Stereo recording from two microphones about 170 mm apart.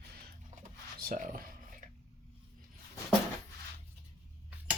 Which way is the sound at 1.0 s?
50° right (ahead or behind).